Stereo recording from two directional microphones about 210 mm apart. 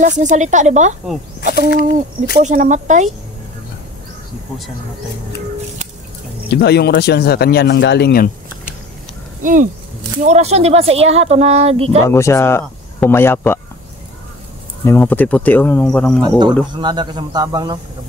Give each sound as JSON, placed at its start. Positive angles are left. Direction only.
{"t": 0.0, "sound": "speech", "side_deg": -35}
{"t": 1.7, "sound": "speech", "side_deg": 45}
{"t": 2.3, "sound": "speech", "side_deg": -40}
{"t": 6.5, "sound": "speech", "side_deg": 50}
{"t": 9.4, "sound": "speech", "side_deg": -40}
{"t": 12.1, "sound": "speech", "side_deg": 10}
{"t": 14.9, "sound": "speech", "side_deg": 10}
{"t": 16.2, "sound": "speech", "side_deg": -20}